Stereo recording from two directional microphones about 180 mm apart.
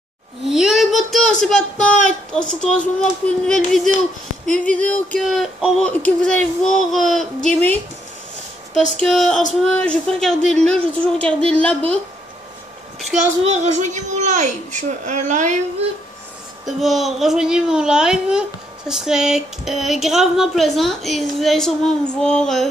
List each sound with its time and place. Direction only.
0.5 s a sound: centre (ahead or behind)
2.6 s a woman's voice: 5° left (ahead or behind)
8.9 s a woman's voice: centre (ahead or behind)
13.4 s a child's voice: 40° right (ahead or behind)
16.6 s a woman's voice: centre (ahead or behind)